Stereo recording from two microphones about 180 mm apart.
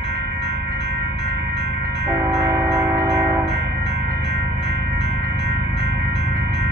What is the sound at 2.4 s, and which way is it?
Music, 15° right (ahead or behind).